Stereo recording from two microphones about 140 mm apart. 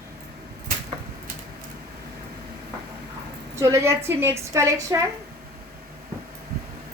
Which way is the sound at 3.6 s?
20° right (ahead or behind).